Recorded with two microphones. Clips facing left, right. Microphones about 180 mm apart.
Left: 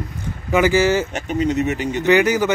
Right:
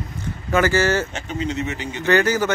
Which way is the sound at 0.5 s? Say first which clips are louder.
Left 3 dB; 15° left (ahead or behind).